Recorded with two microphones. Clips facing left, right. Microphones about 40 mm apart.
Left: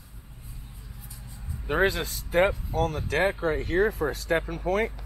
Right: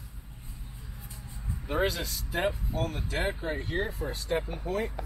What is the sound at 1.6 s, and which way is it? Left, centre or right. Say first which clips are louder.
Speech: left 5 dB; left.